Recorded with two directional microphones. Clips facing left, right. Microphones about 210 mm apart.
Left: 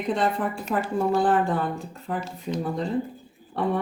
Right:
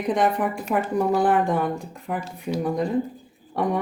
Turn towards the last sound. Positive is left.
turn(degrees=-15)  # may be behind; listen again after turning